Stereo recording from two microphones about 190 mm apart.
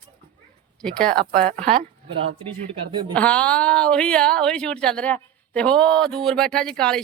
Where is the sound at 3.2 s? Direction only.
5° left (ahead or behind).